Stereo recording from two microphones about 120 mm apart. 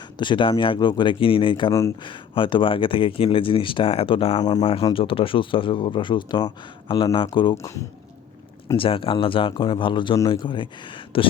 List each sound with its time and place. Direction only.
0.2 s speech: 45° left (ahead or behind)
4.4 s speech: 35° left (ahead or behind)
4.6 s speech: 50° left (ahead or behind)
8.7 s speech: 45° left (ahead or behind)